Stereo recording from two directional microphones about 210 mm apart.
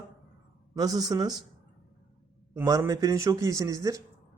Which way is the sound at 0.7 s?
15° right (ahead or behind).